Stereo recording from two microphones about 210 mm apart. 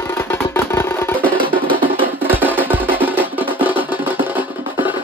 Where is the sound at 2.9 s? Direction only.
10° right (ahead or behind).